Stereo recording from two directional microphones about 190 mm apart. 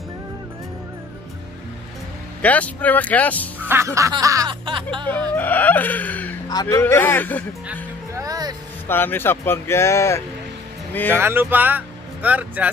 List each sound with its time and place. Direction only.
2.4 s speech: 10° left (ahead or behind)
3.5 s music: 10° right (ahead or behind)
5.3 s speech: 10° left (ahead or behind)
6.5 s speech: 20° left (ahead or behind)
8.2 s music: 20° right (ahead or behind)
8.8 s speech: 10° left (ahead or behind)
11.1 s speech: 10° right (ahead or behind)